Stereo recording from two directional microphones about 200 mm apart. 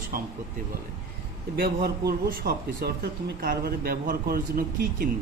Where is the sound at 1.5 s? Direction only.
50° right (ahead or behind).